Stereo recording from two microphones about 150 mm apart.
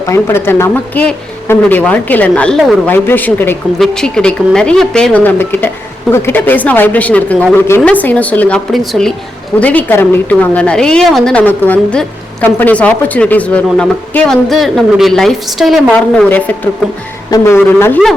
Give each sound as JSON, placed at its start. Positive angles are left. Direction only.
{"t": 0.1, "sound": "a woman's voice", "side_deg": 15}